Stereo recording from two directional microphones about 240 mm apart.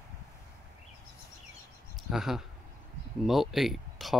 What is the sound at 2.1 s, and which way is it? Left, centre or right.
Speech, centre.